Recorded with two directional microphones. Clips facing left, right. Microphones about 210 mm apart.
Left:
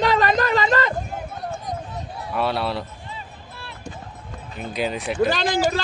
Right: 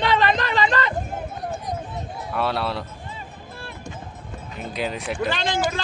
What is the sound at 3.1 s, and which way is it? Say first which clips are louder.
Vehicle: right 1 dB; 50° right (ahead or behind).